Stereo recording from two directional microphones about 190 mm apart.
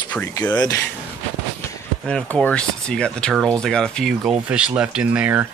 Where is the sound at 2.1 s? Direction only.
5° left (ahead or behind).